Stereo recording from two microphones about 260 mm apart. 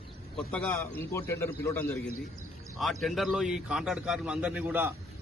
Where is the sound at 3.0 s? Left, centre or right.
Centre.